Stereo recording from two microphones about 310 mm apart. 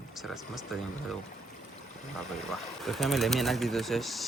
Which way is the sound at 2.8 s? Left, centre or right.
Centre.